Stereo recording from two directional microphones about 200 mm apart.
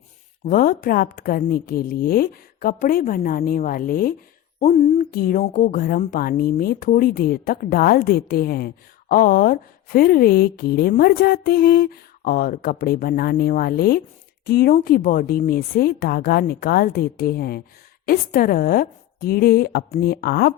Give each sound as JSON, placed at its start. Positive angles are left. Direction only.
{"t": 0.4, "sound": "a woman's voice", "side_deg": 45}